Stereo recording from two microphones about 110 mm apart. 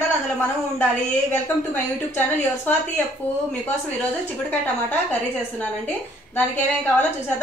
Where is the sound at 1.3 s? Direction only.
15° left (ahead or behind).